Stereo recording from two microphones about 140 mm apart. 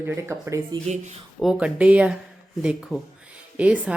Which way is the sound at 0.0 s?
20° right (ahead or behind).